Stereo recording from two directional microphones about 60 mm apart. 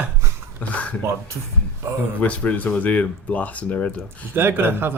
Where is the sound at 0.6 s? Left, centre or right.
Left.